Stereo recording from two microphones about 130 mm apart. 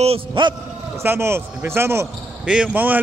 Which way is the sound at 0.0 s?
50° right (ahead or behind).